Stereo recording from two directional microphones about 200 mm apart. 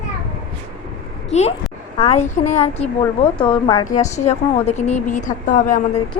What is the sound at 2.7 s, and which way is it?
Speech, 25° left (ahead or behind).